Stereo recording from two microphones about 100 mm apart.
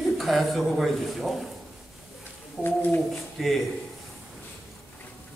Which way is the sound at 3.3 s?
Centre (ahead or behind).